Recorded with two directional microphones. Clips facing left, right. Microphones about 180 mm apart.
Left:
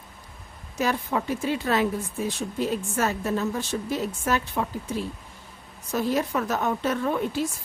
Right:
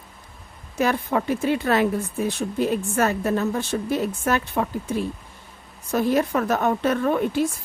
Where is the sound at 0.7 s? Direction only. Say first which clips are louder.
Right 4 dB; 55° right (ahead or behind).